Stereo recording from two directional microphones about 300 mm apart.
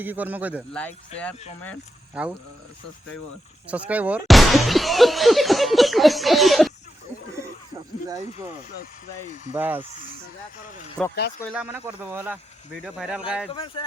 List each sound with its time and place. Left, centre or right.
0.0 s speech: centre
2.2 s speech: centre
3.7 s speech: centre
8.8 s speech: left
9.5 s speech: centre
9.9 s speech: left
11.4 s speech: centre
13.5 s speech: centre